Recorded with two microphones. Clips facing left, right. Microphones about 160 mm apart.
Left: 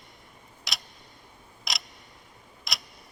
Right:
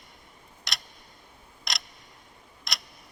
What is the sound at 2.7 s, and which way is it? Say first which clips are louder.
Tick-tock: even; centre (ahead or behind).